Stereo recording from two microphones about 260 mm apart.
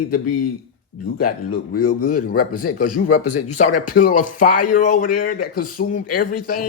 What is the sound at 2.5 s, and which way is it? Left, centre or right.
Speech, left.